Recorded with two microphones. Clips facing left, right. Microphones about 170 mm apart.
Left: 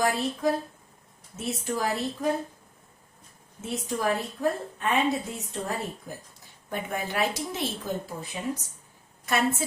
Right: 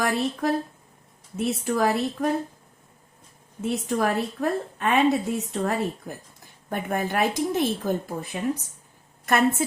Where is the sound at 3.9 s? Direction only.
65° right (ahead or behind).